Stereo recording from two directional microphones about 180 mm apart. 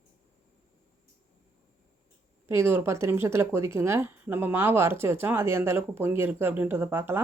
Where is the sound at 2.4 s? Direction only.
15° right (ahead or behind).